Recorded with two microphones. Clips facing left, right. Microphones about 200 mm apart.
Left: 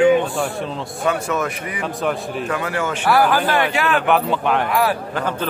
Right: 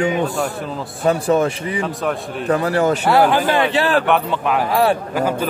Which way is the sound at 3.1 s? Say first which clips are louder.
Left 1 dB; 25° right (ahead or behind).